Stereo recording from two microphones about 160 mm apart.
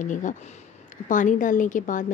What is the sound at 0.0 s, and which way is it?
A woman's voice, 50° left (ahead or behind).